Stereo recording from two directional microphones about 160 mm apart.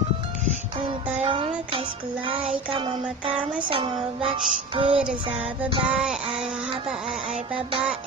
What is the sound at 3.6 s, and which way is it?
Music, 35° right (ahead or behind).